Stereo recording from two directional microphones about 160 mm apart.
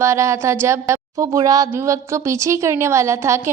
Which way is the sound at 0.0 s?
15° right (ahead or behind).